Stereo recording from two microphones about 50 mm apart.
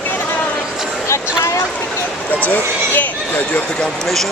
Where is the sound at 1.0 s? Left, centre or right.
Left.